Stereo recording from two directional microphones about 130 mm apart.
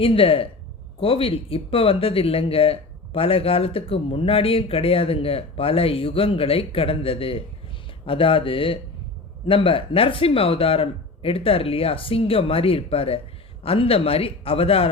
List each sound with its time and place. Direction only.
0.0 s speech: 45° left (ahead or behind)